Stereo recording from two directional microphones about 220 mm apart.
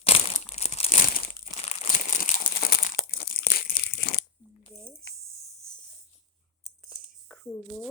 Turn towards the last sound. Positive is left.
turn(degrees=5)  # may be behind; listen again after turning